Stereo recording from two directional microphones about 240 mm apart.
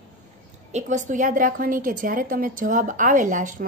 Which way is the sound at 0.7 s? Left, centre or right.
Right.